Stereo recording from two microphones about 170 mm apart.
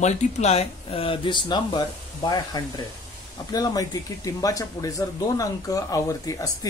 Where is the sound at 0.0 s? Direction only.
40° left (ahead or behind).